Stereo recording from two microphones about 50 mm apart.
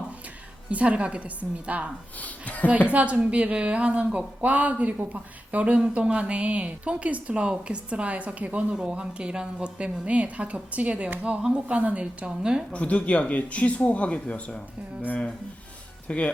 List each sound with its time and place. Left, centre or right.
0.7 s speech: right
2.2 s a woman's voice: left
2.6 s speech: right
8.7 s speech: centre
12.4 s speech: centre
12.7 s speech: left
16.0 s speech: left